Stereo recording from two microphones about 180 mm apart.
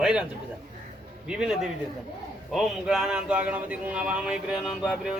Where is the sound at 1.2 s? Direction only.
5° right (ahead or behind).